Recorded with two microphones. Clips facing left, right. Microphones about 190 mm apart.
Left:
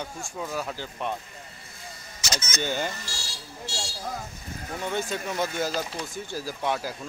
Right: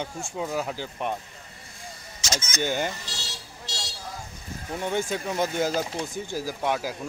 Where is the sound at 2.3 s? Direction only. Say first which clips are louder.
Right 2 dB; 15° right (ahead or behind).